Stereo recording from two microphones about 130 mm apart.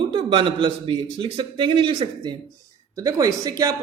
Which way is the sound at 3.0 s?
25° right (ahead or behind).